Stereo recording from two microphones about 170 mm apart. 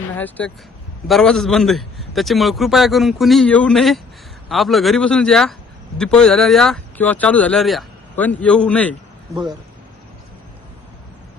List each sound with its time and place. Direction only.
0.2 s a man's voice: 10° left (ahead or behind)
9.3 s speech: 25° right (ahead or behind)